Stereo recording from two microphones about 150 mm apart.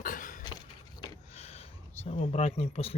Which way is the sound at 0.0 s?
60° left (ahead or behind).